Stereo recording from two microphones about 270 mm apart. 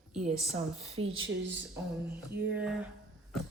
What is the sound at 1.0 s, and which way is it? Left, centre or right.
Speech, right.